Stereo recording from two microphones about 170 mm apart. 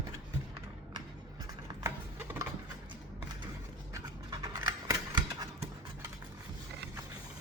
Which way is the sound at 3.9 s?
20° right (ahead or behind).